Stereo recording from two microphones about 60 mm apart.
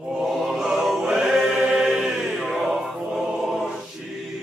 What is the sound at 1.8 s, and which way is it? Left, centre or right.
Chant, centre.